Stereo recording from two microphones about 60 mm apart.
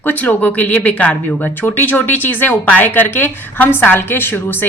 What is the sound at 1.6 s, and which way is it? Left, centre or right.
Speech, left.